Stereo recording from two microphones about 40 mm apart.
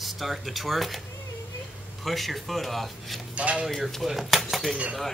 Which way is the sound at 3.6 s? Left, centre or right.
Centre.